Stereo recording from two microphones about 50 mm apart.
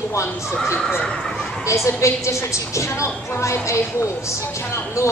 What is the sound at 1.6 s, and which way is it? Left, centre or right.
A woman's voice, left.